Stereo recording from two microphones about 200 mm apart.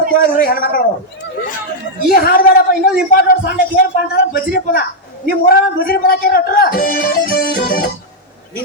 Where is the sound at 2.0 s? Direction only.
50° left (ahead or behind).